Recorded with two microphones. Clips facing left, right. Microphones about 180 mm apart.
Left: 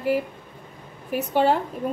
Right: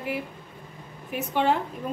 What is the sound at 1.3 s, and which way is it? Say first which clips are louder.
Speech: left 3 dB; 40° left (ahead or behind).